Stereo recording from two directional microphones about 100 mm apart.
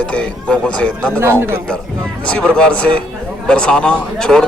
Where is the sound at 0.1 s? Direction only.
10° left (ahead or behind).